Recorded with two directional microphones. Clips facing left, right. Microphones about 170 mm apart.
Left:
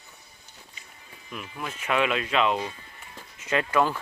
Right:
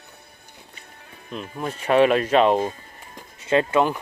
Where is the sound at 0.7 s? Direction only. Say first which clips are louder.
Right 5 dB; 60° right (ahead or behind).